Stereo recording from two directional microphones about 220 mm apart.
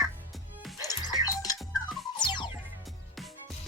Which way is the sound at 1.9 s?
Centre (ahead or behind).